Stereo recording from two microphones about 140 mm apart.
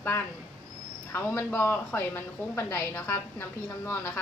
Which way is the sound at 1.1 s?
15° left (ahead or behind).